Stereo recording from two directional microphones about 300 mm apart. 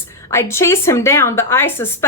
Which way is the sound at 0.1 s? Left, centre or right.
Centre.